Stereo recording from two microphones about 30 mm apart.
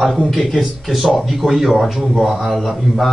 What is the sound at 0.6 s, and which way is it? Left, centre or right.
Speech, centre.